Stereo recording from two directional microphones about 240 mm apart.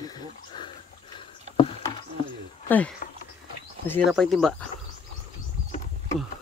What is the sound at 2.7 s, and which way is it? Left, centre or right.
Speech, centre.